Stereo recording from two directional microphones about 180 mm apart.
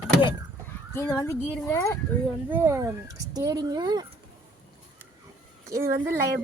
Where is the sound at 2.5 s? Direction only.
15° right (ahead or behind).